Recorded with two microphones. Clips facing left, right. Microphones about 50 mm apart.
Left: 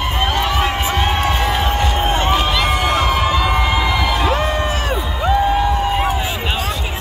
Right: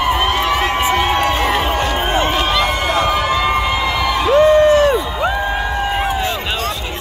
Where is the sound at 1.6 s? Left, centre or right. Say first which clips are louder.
Right 1 dB; centre.